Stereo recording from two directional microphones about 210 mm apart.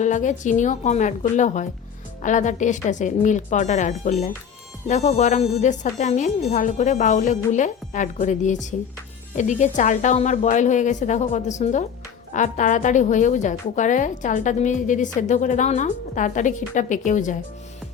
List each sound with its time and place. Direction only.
0.0 s a woman's voice: 35° left (ahead or behind)